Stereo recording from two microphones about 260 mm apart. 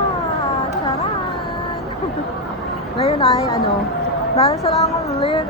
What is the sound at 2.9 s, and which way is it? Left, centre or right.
A woman's voice, left.